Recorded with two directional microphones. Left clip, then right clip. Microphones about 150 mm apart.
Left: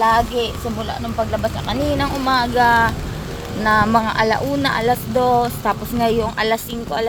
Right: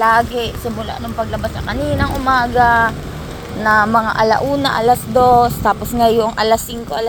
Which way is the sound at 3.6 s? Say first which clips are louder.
Right 3 dB; 30° left (ahead or behind).